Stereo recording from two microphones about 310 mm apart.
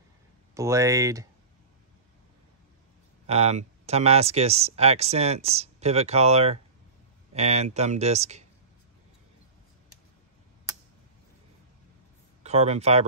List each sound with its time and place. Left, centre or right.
0.6 s speech: centre
3.3 s speech: centre
12.4 s speech: right